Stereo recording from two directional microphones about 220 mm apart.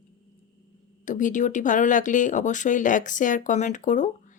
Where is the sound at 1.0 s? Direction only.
35° left (ahead or behind).